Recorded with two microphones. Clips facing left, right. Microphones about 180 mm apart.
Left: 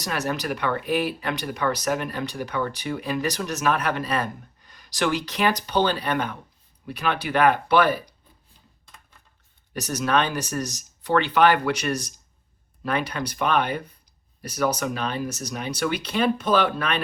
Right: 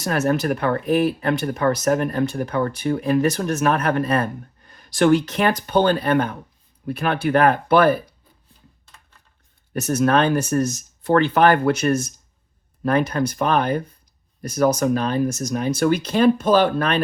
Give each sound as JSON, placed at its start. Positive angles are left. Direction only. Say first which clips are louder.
{"t": 0.0, "sound": "speech", "louder": "right 7 dB", "side_deg": -45}
{"t": 9.7, "sound": "speech", "louder": "right 5 dB", "side_deg": -50}